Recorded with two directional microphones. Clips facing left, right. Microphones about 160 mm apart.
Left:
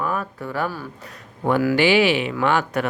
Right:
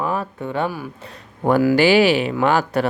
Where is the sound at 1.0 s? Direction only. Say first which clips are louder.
Right 3 dB; 35° right (ahead or behind).